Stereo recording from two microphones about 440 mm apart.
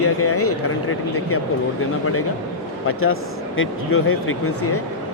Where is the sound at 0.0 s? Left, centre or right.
Left.